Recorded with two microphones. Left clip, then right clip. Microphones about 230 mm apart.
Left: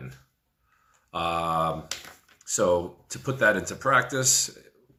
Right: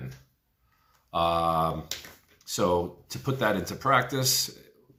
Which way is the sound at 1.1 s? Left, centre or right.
Right.